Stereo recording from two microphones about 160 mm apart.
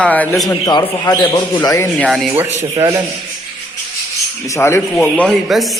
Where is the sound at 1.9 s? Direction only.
Centre (ahead or behind).